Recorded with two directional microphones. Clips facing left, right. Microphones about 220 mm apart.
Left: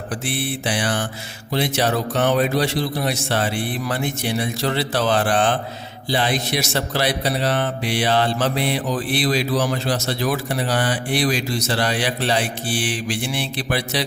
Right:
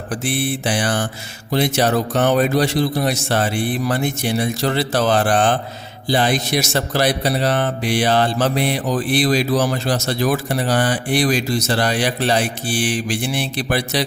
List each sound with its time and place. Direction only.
0.3 s speech: 45° right (ahead or behind)